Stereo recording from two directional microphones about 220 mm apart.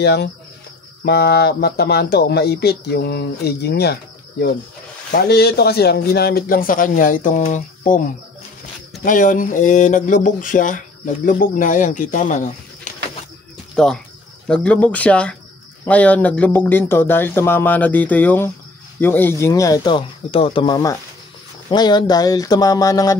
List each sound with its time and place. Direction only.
0.0 s speech: 50° left (ahead or behind)
9.0 s speech: 35° left (ahead or behind)
13.8 s speech: centre (ahead or behind)